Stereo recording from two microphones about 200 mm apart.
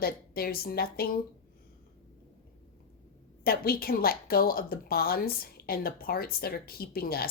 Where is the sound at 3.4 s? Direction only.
50° left (ahead or behind).